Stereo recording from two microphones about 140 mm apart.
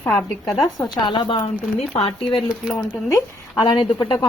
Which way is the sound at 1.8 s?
45° left (ahead or behind).